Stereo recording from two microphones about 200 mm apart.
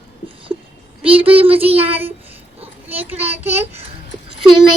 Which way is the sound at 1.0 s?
25° right (ahead or behind).